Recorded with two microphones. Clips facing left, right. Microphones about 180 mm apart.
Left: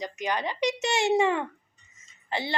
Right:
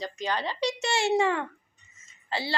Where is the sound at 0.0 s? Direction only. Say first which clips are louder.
Left 1 dB; 15° left (ahead or behind).